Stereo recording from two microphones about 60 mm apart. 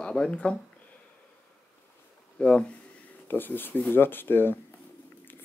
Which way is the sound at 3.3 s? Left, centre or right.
Left.